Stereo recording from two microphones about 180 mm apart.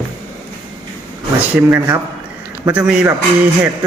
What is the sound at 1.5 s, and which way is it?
Speech, 10° right (ahead or behind).